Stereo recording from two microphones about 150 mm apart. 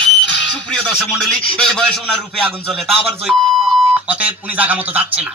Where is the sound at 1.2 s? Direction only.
5° left (ahead or behind).